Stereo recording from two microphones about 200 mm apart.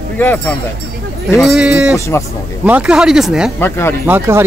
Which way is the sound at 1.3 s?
Centre (ahead or behind).